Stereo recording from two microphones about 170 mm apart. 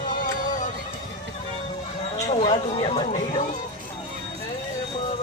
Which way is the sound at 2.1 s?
40° left (ahead or behind).